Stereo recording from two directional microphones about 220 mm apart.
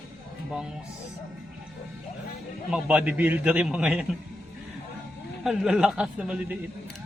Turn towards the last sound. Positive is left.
turn(degrees=-5)  # may be behind; listen again after turning